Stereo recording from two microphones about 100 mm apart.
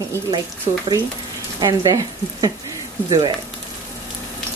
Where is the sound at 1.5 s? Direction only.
40° right (ahead or behind).